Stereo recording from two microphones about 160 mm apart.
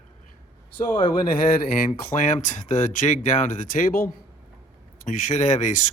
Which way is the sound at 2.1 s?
40° left (ahead or behind).